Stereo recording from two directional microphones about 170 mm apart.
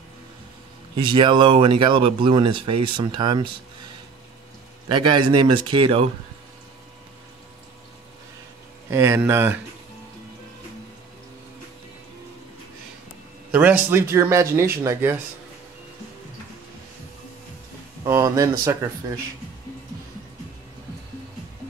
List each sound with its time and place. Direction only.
0.9 s speech: 30° right (ahead or behind)
4.8 s speech: 30° right (ahead or behind)
8.9 s speech: 15° right (ahead or behind)
13.5 s speech: 10° right (ahead or behind)
18.0 s speech: 20° right (ahead or behind)